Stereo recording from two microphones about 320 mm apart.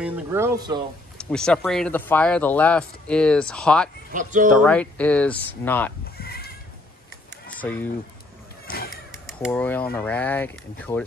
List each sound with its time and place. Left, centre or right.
0.0 s speech: centre
1.1 s speech: centre
4.1 s speech: right
4.6 s speech: centre
6.1 s goat: left
7.4 s a sound: centre
8.6 s a sound: left
9.2 s speech: centre